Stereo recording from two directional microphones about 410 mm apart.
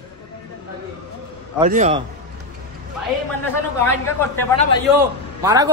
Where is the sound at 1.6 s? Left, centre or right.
Centre.